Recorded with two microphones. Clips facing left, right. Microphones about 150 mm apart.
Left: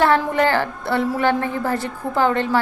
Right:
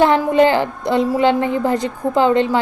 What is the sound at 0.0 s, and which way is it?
A woman's voice, 15° right (ahead or behind).